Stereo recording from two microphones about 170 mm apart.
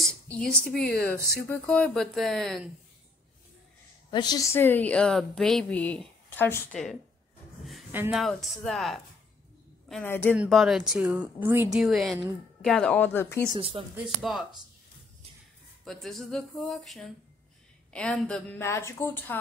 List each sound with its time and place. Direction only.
0.3 s speech: 5° left (ahead or behind)
4.1 s a woman's voice: 25° left (ahead or behind); by 7.0 s 5° left (ahead or behind)
7.9 s speech: 10° right (ahead or behind)
8.2 s speech: centre (ahead or behind)
10.0 s a woman's voice: 15° left (ahead or behind)
10.3 s speech: 5° right (ahead or behind)
11.7 s a woman's voice: centre (ahead or behind); by 13.5 s 15° left (ahead or behind)
13.6 s speech: 35° right (ahead or behind)
13.9 s speech: centre (ahead or behind)
15.8 s a woman's voice: centre (ahead or behind)